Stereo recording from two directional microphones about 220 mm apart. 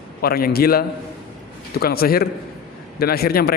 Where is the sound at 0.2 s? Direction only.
45° left (ahead or behind).